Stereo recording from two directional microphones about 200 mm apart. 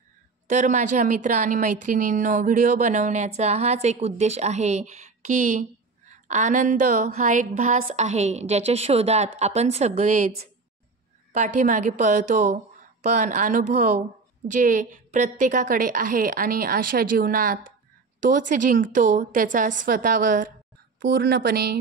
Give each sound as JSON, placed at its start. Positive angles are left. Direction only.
{"t": 0.5, "sound": "a woman's voice", "side_deg": -40}